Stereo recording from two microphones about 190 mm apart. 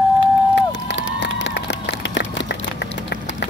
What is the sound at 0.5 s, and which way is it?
Crowd, 65° left (ahead or behind).